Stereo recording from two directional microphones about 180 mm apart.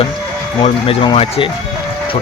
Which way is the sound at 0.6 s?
30° left (ahead or behind).